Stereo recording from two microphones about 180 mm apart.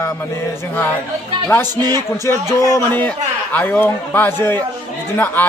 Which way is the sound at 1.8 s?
20° right (ahead or behind).